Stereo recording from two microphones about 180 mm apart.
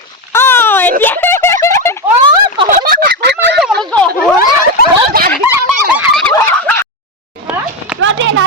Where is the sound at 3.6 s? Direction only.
Centre (ahead or behind).